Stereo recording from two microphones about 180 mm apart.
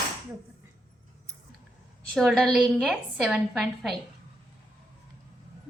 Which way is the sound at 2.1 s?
Centre (ahead or behind).